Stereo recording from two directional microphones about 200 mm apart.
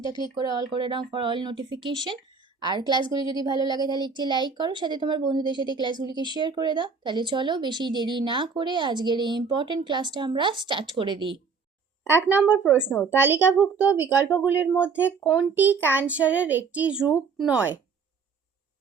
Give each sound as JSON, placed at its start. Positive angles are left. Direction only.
{"t": 0.0, "sound": "a woman's voice", "side_deg": -20}
{"t": 12.1, "sound": "a child's voice", "side_deg": -10}